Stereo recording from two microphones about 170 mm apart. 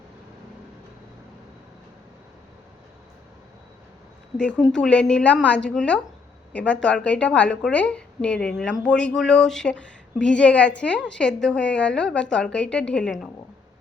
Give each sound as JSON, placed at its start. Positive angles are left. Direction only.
{"t": 4.4, "sound": "a woman's voice", "side_deg": 5}